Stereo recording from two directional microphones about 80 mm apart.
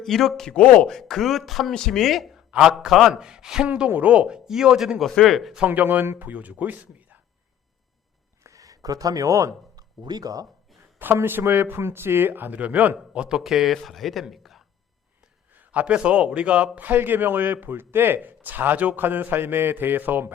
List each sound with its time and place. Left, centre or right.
0.0 s speech: centre
0.9 s a man's voice: centre
3.7 s a man's voice: centre
5.6 s a man's voice: right
8.4 s a sound: right
10.0 s speech: right
11.0 s a man's voice: right; by 14.6 s centre
15.5 s a man's voice: centre